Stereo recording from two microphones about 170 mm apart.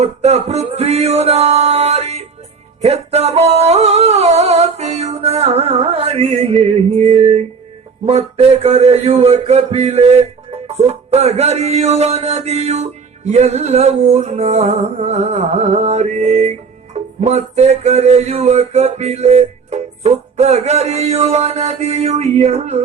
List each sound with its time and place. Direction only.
0.0 s music: 40° right (ahead or behind)
2.8 s singing: 40° right (ahead or behind)
8.0 s a sound: 40° right (ahead or behind)